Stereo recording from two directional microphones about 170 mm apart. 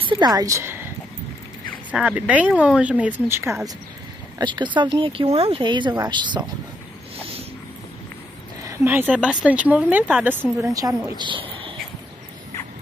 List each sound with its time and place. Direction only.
0.0 s speech: 25° right (ahead or behind)
1.9 s speech: 10° right (ahead or behind)
4.4 s speech: 25° right (ahead or behind)
8.6 s speech: 10° right (ahead or behind)
10.6 s a woman's voice: 20° right (ahead or behind)